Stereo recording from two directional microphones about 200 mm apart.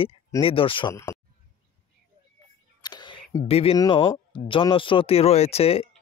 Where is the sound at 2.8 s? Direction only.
20° left (ahead or behind).